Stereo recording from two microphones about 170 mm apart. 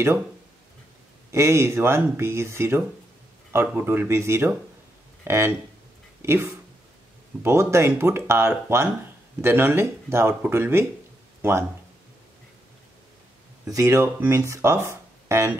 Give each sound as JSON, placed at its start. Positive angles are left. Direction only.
{"t": 1.3, "sound": "speech", "side_deg": -15}
{"t": 13.7, "sound": "speech", "side_deg": -20}